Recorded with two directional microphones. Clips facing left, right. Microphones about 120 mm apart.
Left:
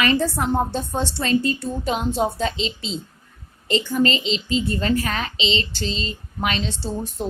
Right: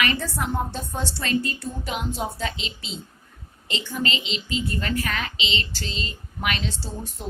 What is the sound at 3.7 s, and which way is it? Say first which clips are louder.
A woman's voice: left 8 dB; 40° left (ahead or behind).